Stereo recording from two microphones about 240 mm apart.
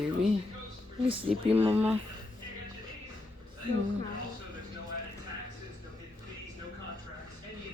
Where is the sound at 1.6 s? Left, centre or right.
Centre.